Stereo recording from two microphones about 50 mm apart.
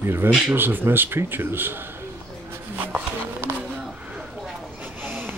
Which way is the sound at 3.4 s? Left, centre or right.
Right.